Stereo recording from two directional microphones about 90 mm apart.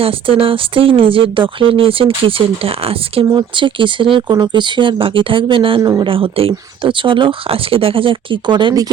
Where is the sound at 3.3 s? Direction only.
65° right (ahead or behind).